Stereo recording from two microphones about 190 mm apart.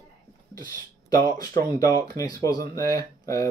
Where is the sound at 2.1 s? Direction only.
20° left (ahead or behind).